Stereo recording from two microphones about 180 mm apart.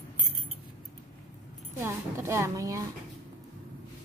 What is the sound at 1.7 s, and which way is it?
A woman's voice, 15° right (ahead or behind).